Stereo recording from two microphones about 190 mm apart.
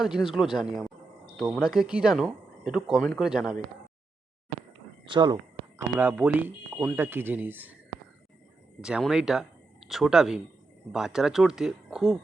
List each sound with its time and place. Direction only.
0.0 s speech: 5° right (ahead or behind)
5.0 s speech: 25° right (ahead or behind)
6.0 s speech: 10° right (ahead or behind)
8.8 s speech: 5° right (ahead or behind)